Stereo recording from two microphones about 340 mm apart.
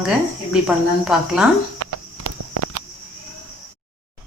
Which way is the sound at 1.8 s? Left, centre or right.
Right.